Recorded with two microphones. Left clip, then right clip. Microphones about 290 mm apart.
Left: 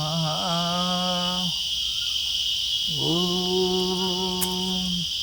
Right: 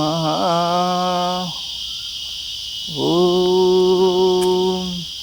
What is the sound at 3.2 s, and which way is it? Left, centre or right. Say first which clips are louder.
Cricket: right 9 dB; right.